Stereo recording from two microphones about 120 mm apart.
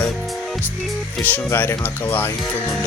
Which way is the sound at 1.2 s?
15° left (ahead or behind).